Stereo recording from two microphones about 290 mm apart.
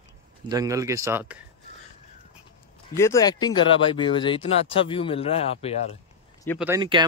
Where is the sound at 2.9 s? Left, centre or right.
Centre.